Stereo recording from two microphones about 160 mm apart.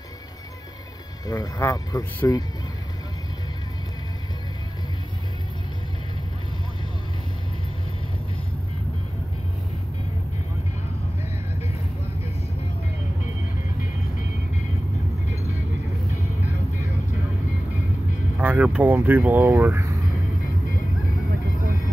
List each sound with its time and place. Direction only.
1.2 s speech: 25° left (ahead or behind)
18.4 s speech: 10° right (ahead or behind)